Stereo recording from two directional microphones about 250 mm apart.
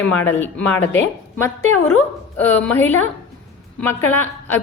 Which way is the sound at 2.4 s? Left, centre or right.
Centre.